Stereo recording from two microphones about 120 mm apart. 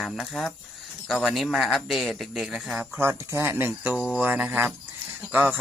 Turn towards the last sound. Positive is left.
turn(degrees=-15)  # may be behind; listen again after turning